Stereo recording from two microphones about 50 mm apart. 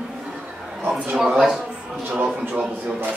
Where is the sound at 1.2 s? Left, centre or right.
Centre.